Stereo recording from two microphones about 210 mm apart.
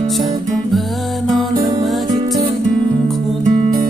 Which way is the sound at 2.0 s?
20° right (ahead or behind).